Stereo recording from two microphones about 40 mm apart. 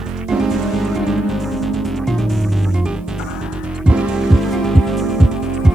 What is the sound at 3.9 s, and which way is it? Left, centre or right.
Music, right.